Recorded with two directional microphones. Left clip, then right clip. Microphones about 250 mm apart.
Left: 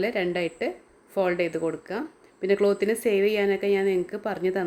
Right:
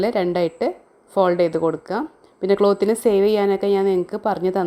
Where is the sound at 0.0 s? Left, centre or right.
Right.